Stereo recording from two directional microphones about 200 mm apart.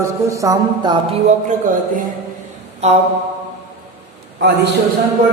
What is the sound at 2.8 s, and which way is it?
Mantra, 30° right (ahead or behind).